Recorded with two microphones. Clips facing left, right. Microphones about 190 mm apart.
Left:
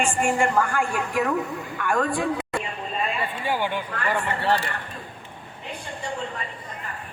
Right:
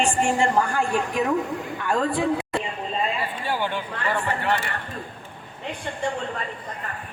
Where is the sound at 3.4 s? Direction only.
15° left (ahead or behind).